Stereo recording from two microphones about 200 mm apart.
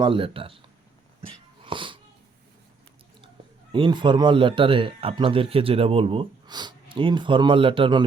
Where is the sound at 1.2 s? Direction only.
25° right (ahead or behind).